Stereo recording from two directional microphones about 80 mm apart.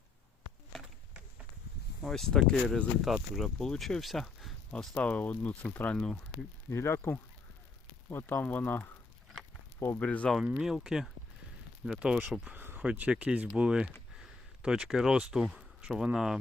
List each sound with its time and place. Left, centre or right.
2.0 s speech: centre
4.7 s speech: centre
6.7 s speech: left
10.0 s speech: centre
10.6 s speech: centre
12.5 s a sound: right
12.9 s speech: centre